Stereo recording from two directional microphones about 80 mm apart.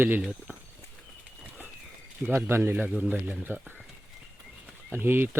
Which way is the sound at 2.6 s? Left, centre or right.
Right.